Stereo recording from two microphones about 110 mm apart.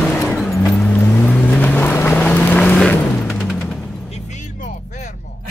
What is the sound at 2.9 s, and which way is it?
Music, 15° left (ahead or behind).